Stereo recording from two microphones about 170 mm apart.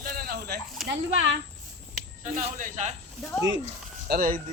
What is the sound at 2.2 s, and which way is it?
Speech, 45° right (ahead or behind).